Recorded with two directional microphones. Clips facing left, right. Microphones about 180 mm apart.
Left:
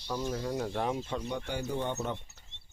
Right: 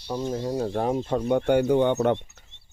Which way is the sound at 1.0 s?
55° right (ahead or behind).